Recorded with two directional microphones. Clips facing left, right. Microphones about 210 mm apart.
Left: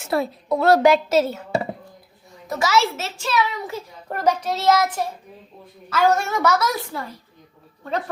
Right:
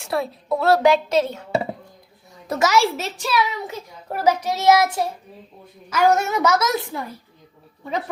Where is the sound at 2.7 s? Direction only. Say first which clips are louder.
Right 1 dB; 10° right (ahead or behind).